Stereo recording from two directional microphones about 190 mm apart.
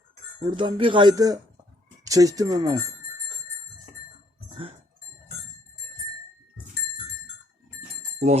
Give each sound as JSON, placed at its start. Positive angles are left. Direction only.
{"t": 0.4, "sound": "speech", "side_deg": -25}